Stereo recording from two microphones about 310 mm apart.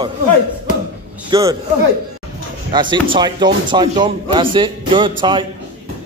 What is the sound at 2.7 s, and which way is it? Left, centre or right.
A man's voice, centre.